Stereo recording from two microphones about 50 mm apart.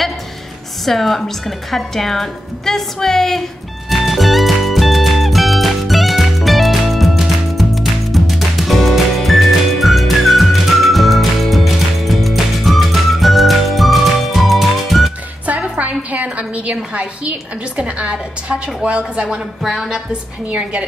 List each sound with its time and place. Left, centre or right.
0.8 s speech: centre
3.9 s music: centre
15.4 s a sound: right
17.7 s a woman's voice: right
19.6 s speech: centre
20.1 s a woman's voice: right